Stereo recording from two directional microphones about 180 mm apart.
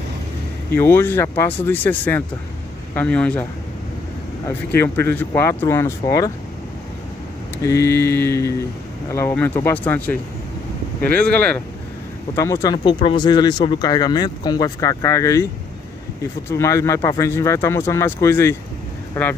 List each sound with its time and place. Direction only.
0.7 s speech: 10° left (ahead or behind)
4.7 s speech: 15° left (ahead or behind)
7.5 s speech: 15° left (ahead or behind)
12.4 s speech: 20° left (ahead or behind)
16.4 s speech: 15° left (ahead or behind)